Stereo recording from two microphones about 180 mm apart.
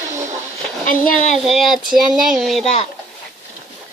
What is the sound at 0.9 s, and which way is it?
Speech, 45° left (ahead or behind).